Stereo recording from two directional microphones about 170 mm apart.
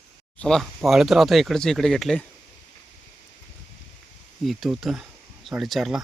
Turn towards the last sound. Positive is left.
turn(degrees=0)  # may be behind; listen again after turning